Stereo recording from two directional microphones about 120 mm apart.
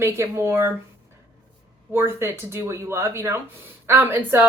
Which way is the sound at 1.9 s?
20° right (ahead or behind).